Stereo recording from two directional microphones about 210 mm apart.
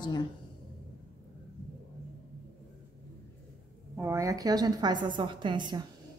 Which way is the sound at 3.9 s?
10° right (ahead or behind).